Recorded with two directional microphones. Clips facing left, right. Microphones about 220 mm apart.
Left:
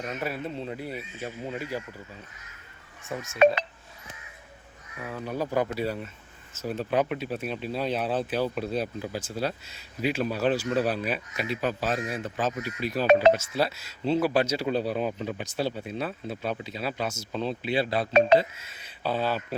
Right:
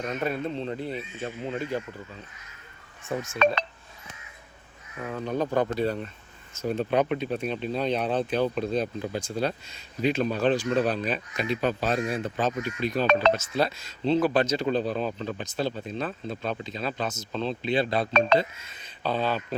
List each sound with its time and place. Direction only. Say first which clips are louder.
0.2 s speech: right 4 dB; 5° left (ahead or behind)
5.2 s speech: right 2 dB; 5° left (ahead or behind)
11.9 s speech: right 4 dB; 25° right (ahead or behind)
12.4 s speech: right 1 dB; 5° left (ahead or behind)